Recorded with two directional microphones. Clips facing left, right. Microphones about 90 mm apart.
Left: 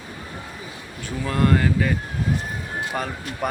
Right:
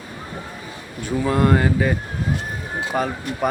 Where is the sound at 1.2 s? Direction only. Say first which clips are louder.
Right 2 dB; 20° right (ahead or behind).